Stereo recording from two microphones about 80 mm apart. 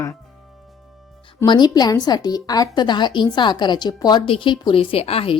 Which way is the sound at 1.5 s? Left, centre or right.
Left.